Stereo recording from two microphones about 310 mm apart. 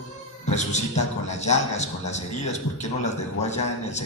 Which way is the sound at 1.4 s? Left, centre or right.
Left.